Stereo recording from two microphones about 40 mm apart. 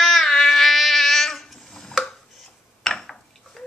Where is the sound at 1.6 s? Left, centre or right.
Centre.